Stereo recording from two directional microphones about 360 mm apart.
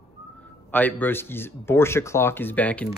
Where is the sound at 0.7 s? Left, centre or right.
Centre.